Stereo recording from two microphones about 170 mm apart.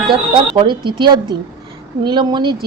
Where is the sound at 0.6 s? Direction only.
30° right (ahead or behind).